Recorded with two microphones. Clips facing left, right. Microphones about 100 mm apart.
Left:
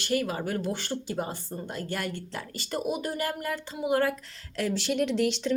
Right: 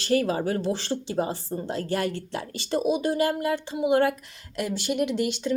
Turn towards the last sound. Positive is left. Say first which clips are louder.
# even
turn(degrees=-5)  # may be behind; listen again after turning